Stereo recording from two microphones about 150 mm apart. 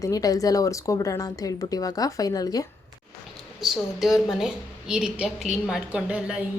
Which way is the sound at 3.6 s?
Centre (ahead or behind).